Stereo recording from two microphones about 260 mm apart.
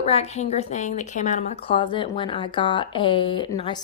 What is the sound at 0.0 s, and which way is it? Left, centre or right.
A woman's voice, left.